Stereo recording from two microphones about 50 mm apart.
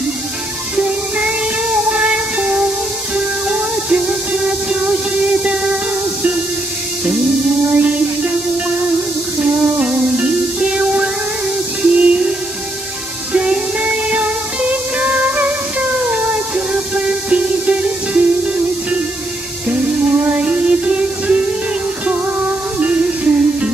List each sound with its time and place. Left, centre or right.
1.9 s music: right
7.7 s music: right
9.4 s music: right
13.8 s music: right
19.7 s music: centre
20.2 s music: right
22.8 s music: right